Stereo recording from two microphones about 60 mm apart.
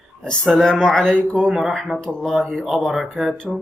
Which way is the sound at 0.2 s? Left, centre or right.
Centre.